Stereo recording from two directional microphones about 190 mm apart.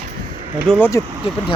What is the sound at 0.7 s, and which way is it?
Speech, 10° left (ahead or behind).